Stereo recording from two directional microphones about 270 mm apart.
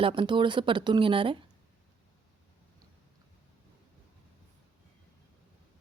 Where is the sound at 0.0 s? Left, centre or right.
Centre.